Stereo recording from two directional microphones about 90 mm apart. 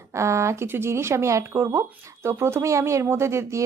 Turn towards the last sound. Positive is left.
turn(degrees=-30)  # may be behind; listen again after turning